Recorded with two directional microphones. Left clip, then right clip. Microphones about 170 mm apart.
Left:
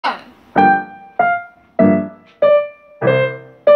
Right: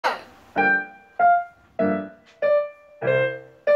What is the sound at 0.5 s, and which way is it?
Music, 45° left (ahead or behind).